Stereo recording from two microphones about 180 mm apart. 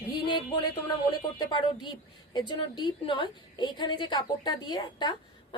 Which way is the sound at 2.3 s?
25° left (ahead or behind).